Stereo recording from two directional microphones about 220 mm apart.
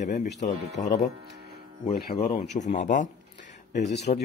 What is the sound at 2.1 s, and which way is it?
Speech, 30° left (ahead or behind).